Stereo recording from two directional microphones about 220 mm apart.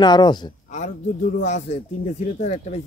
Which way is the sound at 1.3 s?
35° left (ahead or behind).